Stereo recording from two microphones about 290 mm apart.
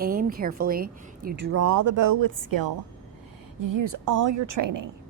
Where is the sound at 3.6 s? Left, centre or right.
Right.